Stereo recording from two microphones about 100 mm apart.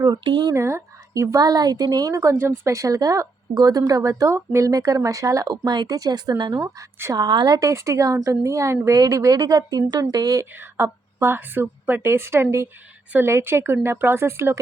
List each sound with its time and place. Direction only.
0.0 s speech: 45° right (ahead or behind)
0.5 s speech: 30° right (ahead or behind)
7.3 s speech: 45° right (ahead or behind)
7.7 s a woman's voice: 30° right (ahead or behind)
10.5 s a woman's voice: 20° right (ahead or behind)